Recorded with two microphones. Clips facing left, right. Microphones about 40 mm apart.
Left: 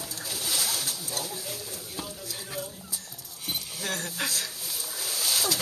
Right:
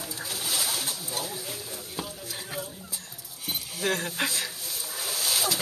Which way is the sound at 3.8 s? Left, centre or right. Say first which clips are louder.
Right 5 dB; right.